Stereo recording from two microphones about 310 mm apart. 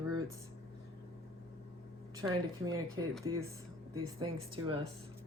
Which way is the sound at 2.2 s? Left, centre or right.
Centre.